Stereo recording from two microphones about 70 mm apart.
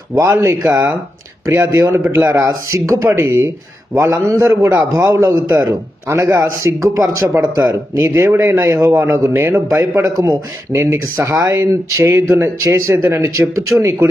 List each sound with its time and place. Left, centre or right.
0.1 s speech: right
0.7 s a man's voice: right
1.5 s speech: right
3.2 s speech: right
3.9 s a man's voice: right
9.3 s speech: right
9.6 s a man's voice: right